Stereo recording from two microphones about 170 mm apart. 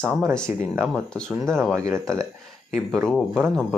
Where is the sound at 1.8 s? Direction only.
15° right (ahead or behind).